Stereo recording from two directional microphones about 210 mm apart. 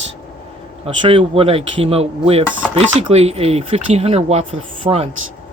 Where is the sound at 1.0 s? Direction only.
25° right (ahead or behind).